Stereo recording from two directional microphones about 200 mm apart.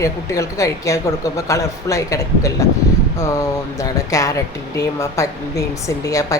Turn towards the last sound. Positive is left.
turn(degrees=15)  # may be behind; listen again after turning